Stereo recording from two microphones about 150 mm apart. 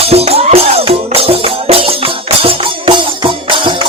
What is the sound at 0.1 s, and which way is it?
Music, 45° right (ahead or behind).